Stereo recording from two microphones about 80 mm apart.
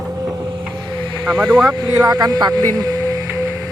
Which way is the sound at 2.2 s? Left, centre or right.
Right.